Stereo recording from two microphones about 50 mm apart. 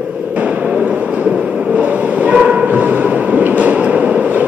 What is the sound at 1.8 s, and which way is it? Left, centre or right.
Train, right.